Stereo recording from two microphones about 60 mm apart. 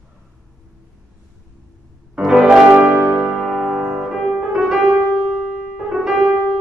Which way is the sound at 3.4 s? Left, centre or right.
Centre.